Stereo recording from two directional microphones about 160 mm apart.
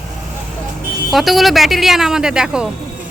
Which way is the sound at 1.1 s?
Centre (ahead or behind).